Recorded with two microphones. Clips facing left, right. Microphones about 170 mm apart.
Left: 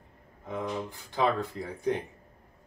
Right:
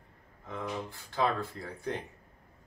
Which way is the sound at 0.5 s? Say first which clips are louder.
Left 4 dB; 15° left (ahead or behind).